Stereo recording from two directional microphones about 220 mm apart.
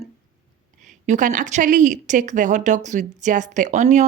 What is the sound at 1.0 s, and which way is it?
Speech, 35° right (ahead or behind).